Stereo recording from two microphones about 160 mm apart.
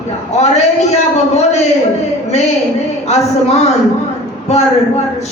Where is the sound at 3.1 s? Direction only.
45° left (ahead or behind).